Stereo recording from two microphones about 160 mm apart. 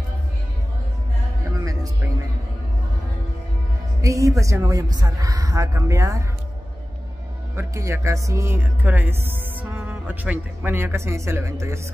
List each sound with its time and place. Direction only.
1.6 s music: 20° right (ahead or behind)
4.0 s a woman's voice: 20° right (ahead or behind)
7.5 s speech: 20° right (ahead or behind)